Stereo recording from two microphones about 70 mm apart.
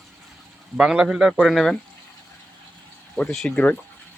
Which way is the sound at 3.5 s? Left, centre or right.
Left.